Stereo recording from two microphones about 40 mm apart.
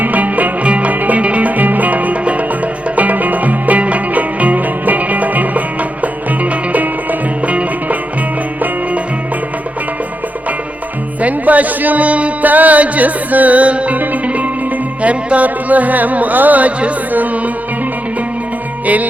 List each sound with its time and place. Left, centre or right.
0.0 s music: right
11.2 s speech: right
14.0 s music: right
15.0 s music: right
15.4 s music: right